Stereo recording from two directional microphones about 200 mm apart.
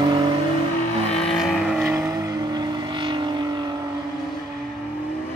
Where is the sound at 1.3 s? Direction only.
Centre (ahead or behind).